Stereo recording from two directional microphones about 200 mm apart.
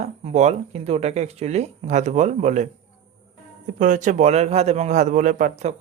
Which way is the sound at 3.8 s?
40° right (ahead or behind).